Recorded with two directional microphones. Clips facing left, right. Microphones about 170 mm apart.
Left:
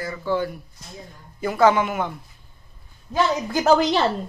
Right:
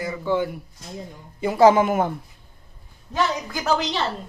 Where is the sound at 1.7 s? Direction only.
40° right (ahead or behind).